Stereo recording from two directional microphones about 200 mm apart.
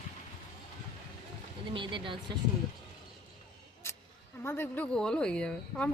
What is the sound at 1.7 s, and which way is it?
Speech, 25° right (ahead or behind).